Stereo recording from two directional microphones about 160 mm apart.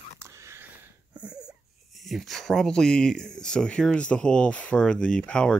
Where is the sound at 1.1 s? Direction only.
5° right (ahead or behind).